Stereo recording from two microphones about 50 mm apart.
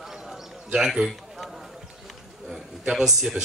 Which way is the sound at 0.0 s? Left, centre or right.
Centre.